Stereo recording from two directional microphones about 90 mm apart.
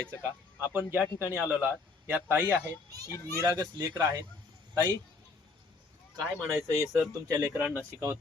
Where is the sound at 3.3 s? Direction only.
45° right (ahead or behind).